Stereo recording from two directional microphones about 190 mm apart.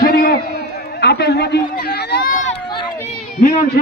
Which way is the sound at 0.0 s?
50° left (ahead or behind).